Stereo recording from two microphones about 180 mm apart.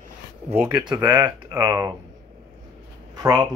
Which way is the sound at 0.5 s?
10° right (ahead or behind).